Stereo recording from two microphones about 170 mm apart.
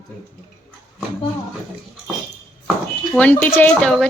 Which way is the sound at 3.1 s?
10° left (ahead or behind).